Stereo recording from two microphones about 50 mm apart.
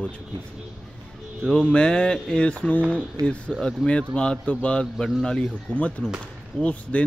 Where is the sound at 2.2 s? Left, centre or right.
Centre.